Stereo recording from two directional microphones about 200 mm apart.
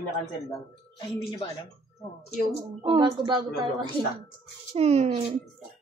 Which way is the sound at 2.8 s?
25° right (ahead or behind).